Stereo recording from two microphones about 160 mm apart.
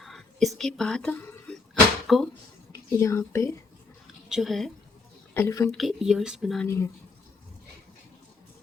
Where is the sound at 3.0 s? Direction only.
15° left (ahead or behind).